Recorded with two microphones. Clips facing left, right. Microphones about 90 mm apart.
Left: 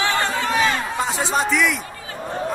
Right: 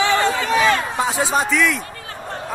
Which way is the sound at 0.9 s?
Centre (ahead or behind).